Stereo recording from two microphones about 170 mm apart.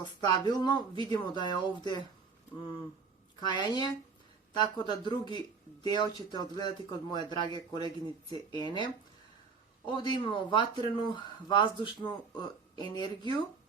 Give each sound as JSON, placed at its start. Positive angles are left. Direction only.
{"t": 0.0, "sound": "speech", "side_deg": 25}
{"t": 3.4, "sound": "speech", "side_deg": 25}